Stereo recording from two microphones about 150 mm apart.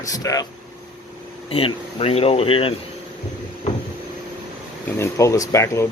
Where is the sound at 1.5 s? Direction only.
40° left (ahead or behind).